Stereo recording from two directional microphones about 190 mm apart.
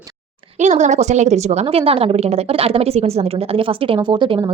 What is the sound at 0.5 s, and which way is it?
A woman's voice, 40° right (ahead or behind).